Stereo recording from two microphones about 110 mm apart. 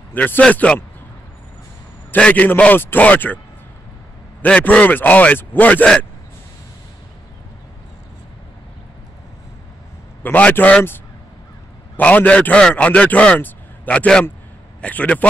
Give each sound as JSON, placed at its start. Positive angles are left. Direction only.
{"t": 0.1, "sound": "a man's voice", "side_deg": 15}
{"t": 2.0, "sound": "a man's voice", "side_deg": 10}
{"t": 4.4, "sound": "a man's voice", "side_deg": 15}
{"t": 10.2, "sound": "a man's voice", "side_deg": 15}
{"t": 12.0, "sound": "a man's voice", "side_deg": 15}